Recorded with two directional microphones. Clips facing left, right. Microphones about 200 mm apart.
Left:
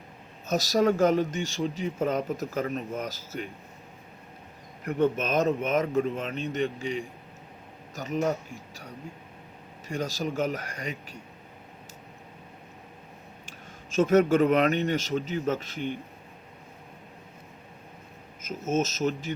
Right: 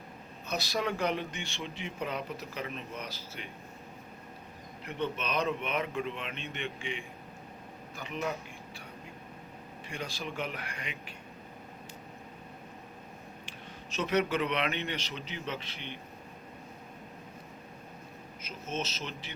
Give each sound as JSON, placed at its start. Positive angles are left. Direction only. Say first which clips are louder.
{"t": 0.4, "sound": "speech", "louder": "left 10 dB", "side_deg": 45}
{"t": 4.9, "sound": "speech", "louder": "left 9 dB", "side_deg": 45}
{"t": 9.9, "sound": "speech", "louder": "left 9 dB", "side_deg": 40}
{"t": 13.9, "sound": "speech", "louder": "left 9 dB", "side_deg": 45}
{"t": 18.4, "sound": "speech", "louder": "left 10 dB", "side_deg": 45}